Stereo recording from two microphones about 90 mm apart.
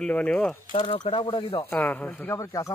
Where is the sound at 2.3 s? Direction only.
35° left (ahead or behind).